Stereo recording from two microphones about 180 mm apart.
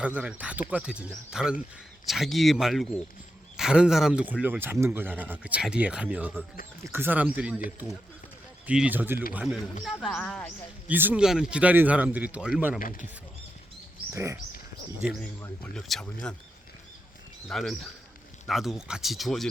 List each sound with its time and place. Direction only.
0.0 s speech: 5° right (ahead or behind)
8.6 s speech: 5° right (ahead or behind)
10.8 s speech: 10° right (ahead or behind)
12.8 s speech: 50° left (ahead or behind)
14.1 s speech: 15° right (ahead or behind)
15.4 s speech: 5° left (ahead or behind)
17.5 s speech: centre (ahead or behind)